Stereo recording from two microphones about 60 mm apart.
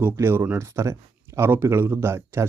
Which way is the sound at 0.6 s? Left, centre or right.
Right.